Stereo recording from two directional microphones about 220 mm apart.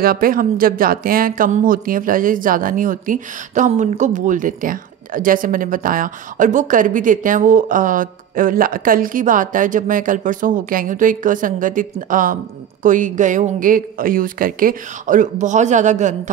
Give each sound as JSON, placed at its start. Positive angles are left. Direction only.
{"t": 0.0, "sound": "speech", "side_deg": -40}